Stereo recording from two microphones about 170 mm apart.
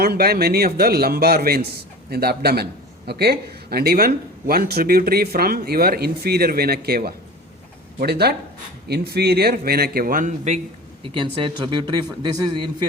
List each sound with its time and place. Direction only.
0.0 s a man's voice: 65° right (ahead or behind); by 10.6 s 45° right (ahead or behind)
11.0 s a man's voice: 30° right (ahead or behind)